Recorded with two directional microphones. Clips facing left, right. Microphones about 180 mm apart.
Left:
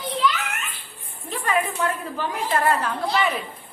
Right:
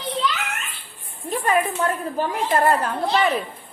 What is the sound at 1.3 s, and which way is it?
A woman's voice, 40° right (ahead or behind).